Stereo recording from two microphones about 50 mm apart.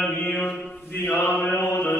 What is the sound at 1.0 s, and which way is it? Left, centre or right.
Mantra, left.